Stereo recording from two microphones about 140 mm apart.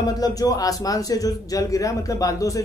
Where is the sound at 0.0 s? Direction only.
25° left (ahead or behind).